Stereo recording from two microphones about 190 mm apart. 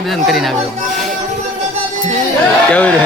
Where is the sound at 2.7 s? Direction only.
5° left (ahead or behind).